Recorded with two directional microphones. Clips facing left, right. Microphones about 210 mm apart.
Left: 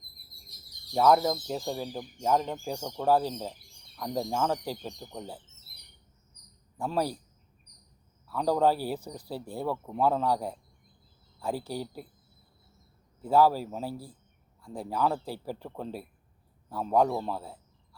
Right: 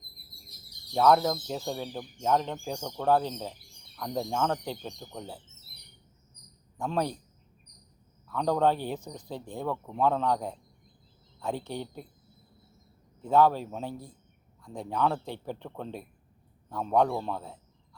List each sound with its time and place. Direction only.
0.9 s speech: 5° left (ahead or behind)
6.7 s speech: 5° left (ahead or behind)
8.3 s speech: 5° left (ahead or behind)
13.2 s speech: 5° left (ahead or behind)